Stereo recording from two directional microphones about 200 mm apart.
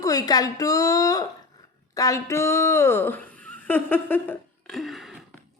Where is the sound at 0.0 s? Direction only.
15° left (ahead or behind).